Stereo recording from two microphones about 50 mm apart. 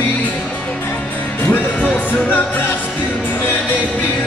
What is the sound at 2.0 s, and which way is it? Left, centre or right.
Music, left.